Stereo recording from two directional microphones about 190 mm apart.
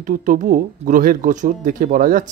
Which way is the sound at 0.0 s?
45° right (ahead or behind).